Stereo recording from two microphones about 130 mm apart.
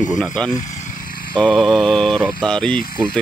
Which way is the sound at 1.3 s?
5° left (ahead or behind).